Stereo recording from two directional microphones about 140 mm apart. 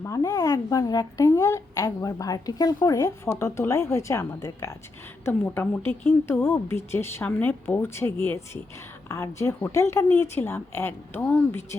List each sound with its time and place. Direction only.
0.0 s a woman's voice: 25° left (ahead or behind)